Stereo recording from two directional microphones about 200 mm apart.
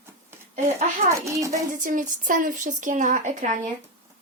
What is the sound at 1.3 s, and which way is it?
Speech, 15° right (ahead or behind).